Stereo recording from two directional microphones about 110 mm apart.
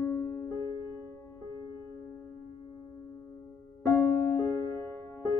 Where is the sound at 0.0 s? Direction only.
20° left (ahead or behind).